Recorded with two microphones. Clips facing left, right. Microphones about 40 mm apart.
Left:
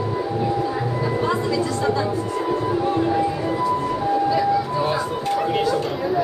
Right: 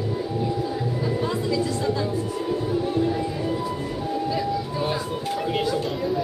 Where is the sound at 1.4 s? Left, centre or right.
Centre.